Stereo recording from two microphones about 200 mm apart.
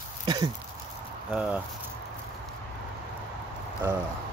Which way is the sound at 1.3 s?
5° right (ahead or behind).